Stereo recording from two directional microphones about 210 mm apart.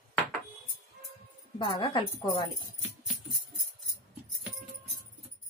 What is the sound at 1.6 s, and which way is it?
Speech, 20° left (ahead or behind).